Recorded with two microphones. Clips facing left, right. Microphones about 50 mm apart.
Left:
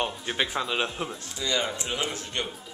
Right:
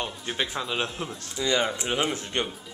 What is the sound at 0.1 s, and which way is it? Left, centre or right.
Speech, centre.